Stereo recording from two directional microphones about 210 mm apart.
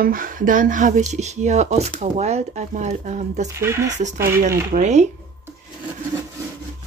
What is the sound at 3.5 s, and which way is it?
Speech, 10° right (ahead or behind).